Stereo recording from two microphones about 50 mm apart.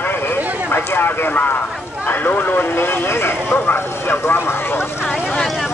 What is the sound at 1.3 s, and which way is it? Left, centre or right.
Speech, left.